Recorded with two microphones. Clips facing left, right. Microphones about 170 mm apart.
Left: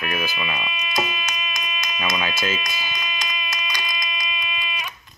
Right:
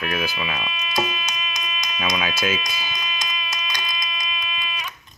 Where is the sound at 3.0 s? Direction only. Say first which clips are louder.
Even; 55° left (ahead or behind).